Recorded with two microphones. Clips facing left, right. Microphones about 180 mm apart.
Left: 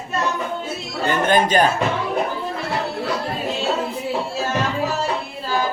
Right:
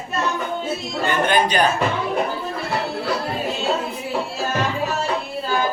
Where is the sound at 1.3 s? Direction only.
45° left (ahead or behind).